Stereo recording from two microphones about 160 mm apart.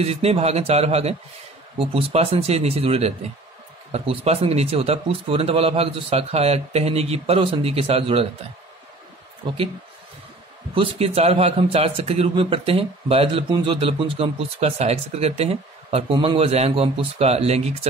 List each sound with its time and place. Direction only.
0.0 s a man's voice: 40° right (ahead or behind)
10.7 s a man's voice: 35° right (ahead or behind)